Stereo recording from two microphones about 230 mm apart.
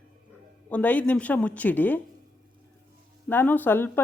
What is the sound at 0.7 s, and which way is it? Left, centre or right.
Speech, centre.